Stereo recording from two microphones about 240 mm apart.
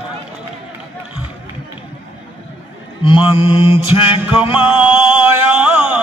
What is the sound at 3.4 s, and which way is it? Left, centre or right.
Mantra, left.